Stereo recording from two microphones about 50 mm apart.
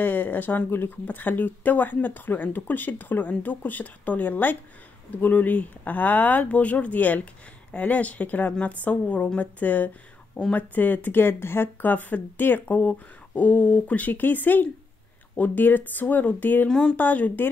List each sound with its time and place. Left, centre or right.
0.0 s a woman's voice: left
11.9 s speech: left
16.6 s speech: centre
16.9 s speech: left